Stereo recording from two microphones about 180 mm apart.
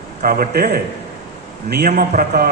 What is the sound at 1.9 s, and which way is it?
Speech, 55° right (ahead or behind).